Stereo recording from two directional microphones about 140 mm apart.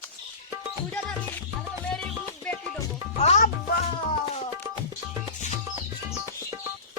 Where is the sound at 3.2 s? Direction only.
50° left (ahead or behind).